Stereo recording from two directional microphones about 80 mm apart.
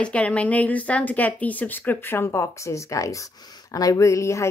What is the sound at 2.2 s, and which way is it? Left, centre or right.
A woman's voice, left.